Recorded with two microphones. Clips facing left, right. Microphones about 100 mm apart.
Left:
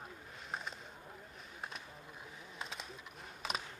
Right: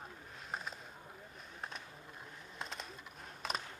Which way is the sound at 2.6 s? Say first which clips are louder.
Right 1 dB; centre (ahead or behind).